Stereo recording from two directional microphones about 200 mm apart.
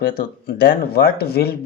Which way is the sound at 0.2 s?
50° left (ahead or behind).